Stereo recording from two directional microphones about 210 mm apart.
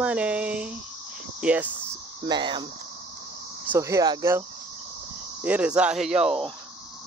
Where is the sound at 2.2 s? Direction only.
20° right (ahead or behind).